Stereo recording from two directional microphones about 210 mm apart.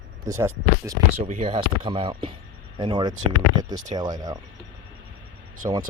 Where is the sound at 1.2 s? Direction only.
30° right (ahead or behind).